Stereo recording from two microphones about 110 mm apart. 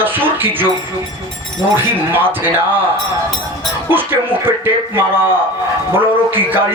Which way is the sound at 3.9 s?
20° right (ahead or behind).